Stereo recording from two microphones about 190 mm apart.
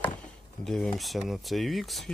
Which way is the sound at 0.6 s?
5° left (ahead or behind).